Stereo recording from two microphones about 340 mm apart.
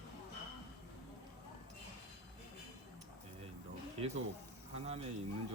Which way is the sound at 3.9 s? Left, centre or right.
Centre.